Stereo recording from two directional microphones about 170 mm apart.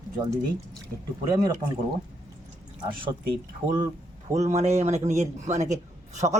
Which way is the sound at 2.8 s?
30° right (ahead or behind).